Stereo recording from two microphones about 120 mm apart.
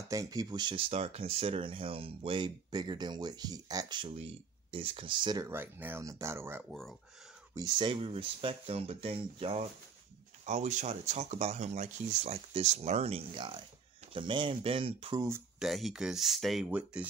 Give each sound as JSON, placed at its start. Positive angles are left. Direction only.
{"t": 0.1, "sound": "speech", "side_deg": -30}
{"t": 0.7, "sound": "speech", "side_deg": -55}
{"t": 4.0, "sound": "speech", "side_deg": -50}
{"t": 5.4, "sound": "speech", "side_deg": -20}
{"t": 6.7, "sound": "speech", "side_deg": 0}
{"t": 7.5, "sound": "speech", "side_deg": -35}
{"t": 7.9, "sound": "speech", "side_deg": -50}
{"t": 10.4, "sound": "speech", "side_deg": -75}
{"t": 15.6, "sound": "speech", "side_deg": 0}
{"t": 16.7, "sound": "speech", "side_deg": -10}